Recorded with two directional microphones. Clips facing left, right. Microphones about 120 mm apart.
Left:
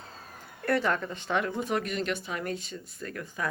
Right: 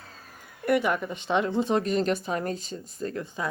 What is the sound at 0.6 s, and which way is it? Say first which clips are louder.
Speech: right 3 dB; 15° right (ahead or behind).